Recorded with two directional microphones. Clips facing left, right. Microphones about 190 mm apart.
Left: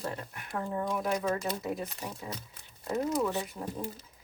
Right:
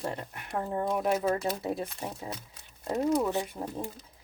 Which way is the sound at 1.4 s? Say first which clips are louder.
Right 2 dB; 30° right (ahead or behind).